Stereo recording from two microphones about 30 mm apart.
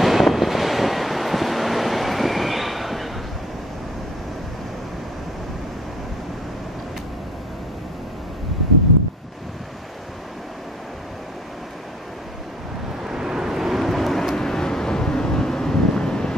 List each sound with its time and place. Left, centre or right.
0.0 s wind noise: centre
13.1 s vehicle: centre
14.3 s vehicle: centre